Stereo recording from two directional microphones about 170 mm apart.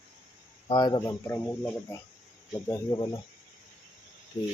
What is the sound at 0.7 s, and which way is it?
Speech, 25° left (ahead or behind).